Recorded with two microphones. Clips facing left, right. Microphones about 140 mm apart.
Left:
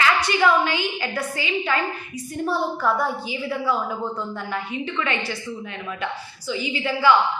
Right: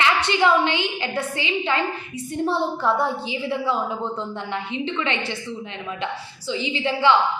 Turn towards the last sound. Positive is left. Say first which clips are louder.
# even
turn(degrees=-25)  # may be behind; listen again after turning